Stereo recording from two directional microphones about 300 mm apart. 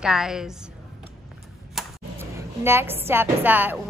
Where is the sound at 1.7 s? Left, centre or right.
Centre.